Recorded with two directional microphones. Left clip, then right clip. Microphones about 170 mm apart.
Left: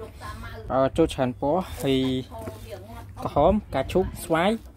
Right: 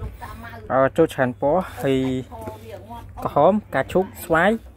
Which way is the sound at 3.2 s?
Centre (ahead or behind).